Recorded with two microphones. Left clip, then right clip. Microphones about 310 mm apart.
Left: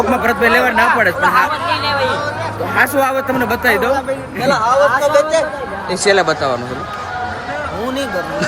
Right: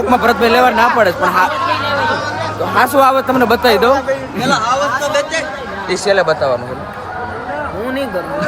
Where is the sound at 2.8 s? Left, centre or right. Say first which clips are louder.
Right 4 dB; centre.